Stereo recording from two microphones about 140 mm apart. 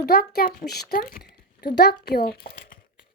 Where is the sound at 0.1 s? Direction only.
90° left.